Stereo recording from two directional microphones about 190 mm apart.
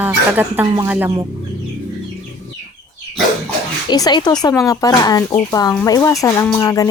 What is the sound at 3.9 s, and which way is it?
Speech, 20° left (ahead or behind).